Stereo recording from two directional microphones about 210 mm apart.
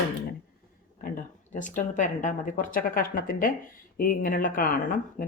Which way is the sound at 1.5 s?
35° left (ahead or behind).